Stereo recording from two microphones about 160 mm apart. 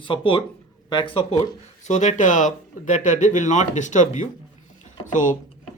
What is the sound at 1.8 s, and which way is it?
Speech, 50° left (ahead or behind).